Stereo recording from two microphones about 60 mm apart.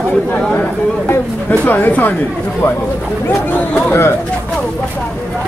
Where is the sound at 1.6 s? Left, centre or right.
Left.